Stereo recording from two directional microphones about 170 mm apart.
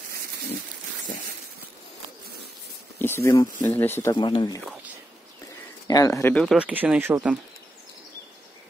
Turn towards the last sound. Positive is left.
turn(degrees=-15)  # may be behind; listen again after turning